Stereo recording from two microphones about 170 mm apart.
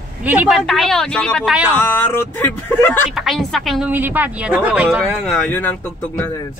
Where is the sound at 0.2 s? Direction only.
10° right (ahead or behind).